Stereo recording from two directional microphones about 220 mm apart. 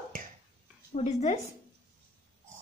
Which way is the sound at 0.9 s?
30° left (ahead or behind).